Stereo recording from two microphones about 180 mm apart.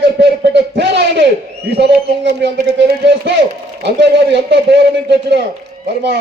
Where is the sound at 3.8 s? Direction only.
70° right (ahead or behind).